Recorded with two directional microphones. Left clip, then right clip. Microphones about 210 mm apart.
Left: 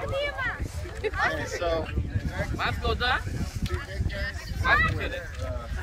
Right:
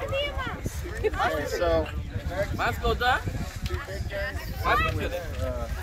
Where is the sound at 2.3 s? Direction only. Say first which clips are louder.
Right 3 dB; 40° right (ahead or behind).